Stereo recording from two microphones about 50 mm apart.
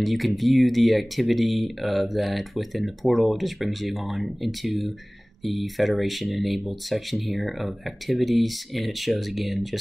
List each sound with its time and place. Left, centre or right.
0.0 s speech: centre